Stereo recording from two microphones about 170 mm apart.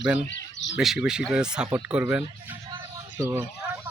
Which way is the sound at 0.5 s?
90° left.